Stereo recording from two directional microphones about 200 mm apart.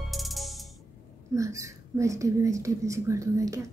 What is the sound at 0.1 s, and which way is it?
Music, centre (ahead or behind).